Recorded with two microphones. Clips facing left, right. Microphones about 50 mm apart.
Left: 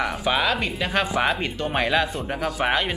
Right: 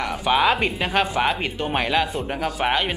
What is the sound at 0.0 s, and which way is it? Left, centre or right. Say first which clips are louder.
Speech: right 3 dB; centre.